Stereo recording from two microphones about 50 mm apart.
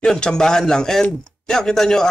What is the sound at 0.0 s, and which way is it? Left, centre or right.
Speech, centre.